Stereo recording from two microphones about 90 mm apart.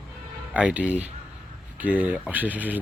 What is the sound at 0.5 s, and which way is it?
Speech, 15° right (ahead or behind).